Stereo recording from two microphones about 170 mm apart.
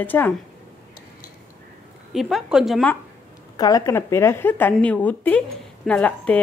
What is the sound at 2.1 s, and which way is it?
Speech, centre (ahead or behind).